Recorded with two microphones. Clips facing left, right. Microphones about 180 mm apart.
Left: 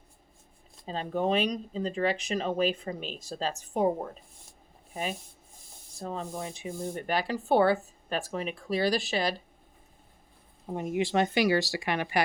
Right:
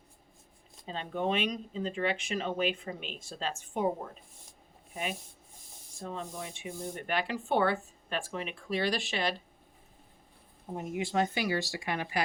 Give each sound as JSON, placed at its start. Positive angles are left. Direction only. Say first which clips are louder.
{"t": 0.9, "sound": "speech", "louder": "left 4 dB", "side_deg": 40}
{"t": 6.0, "sound": "speech", "louder": "left 4 dB", "side_deg": 35}
{"t": 10.8, "sound": "speech", "louder": "left 4 dB", "side_deg": 75}